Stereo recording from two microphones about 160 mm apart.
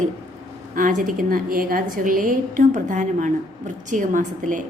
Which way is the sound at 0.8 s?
55° right (ahead or behind).